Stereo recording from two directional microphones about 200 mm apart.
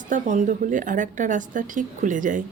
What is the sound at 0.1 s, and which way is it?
Speech, 40° right (ahead or behind).